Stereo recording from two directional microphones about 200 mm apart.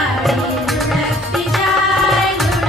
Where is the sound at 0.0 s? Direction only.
Centre (ahead or behind).